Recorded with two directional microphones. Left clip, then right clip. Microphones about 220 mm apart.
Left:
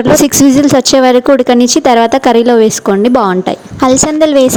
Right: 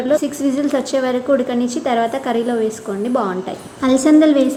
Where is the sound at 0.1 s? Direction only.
45° left (ahead or behind).